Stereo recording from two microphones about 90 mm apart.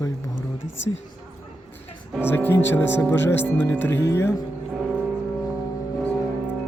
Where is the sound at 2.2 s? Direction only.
25° left (ahead or behind).